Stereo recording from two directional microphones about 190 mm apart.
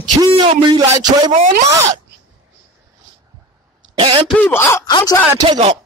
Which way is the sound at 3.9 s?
30° right (ahead or behind).